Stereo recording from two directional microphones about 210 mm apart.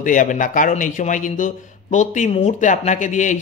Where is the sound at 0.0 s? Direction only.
40° left (ahead or behind).